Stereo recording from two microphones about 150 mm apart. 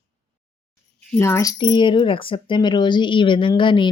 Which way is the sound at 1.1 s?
20° left (ahead or behind).